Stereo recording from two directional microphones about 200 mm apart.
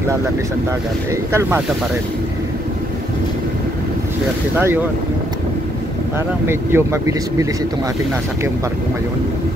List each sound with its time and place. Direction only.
6.4 s speech: 10° right (ahead or behind)